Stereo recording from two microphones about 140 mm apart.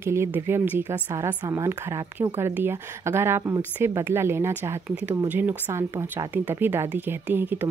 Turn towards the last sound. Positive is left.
turn(degrees=-15)  # may be behind; listen again after turning